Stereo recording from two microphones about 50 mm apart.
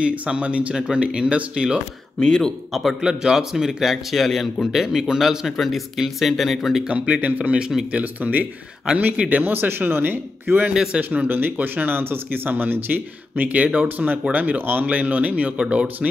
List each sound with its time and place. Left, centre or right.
0.0 s speech: right
0.7 s a man's voice: centre
2.1 s a man's voice: centre
2.7 s speech: centre
3.0 s a man's voice: centre
4.8 s speech: centre
7.2 s speech: right
10.7 s a man's voice: centre
11.0 s speech: right